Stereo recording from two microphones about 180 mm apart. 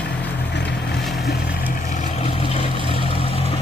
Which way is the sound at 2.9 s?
30° right (ahead or behind).